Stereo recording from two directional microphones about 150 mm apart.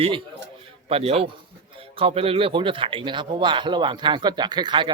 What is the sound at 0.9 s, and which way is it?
Speech, 40° right (ahead or behind).